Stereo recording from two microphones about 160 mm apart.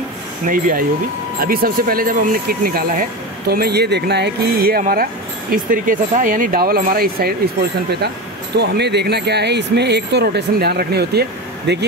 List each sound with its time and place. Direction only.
0.5 s speech: 60° right (ahead or behind)
8.5 s speech: 90° right